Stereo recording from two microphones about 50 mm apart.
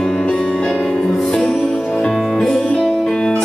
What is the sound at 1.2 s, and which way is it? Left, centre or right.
Music, centre.